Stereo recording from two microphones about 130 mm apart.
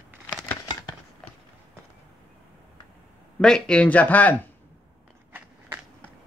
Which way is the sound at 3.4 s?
5° left (ahead or behind).